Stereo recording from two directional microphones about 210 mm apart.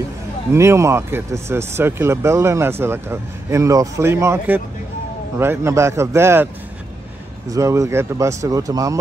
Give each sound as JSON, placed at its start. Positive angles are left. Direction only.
{"t": 0.5, "sound": "speech", "side_deg": -15}
{"t": 7.5, "sound": "speech", "side_deg": -15}